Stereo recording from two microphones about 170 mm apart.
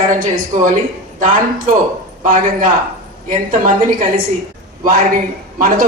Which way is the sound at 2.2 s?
55° right (ahead or behind).